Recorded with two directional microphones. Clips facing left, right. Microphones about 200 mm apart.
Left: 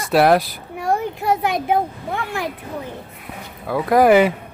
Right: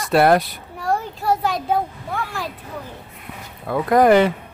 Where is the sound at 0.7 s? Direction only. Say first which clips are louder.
Left 2 dB; 20° left (ahead or behind).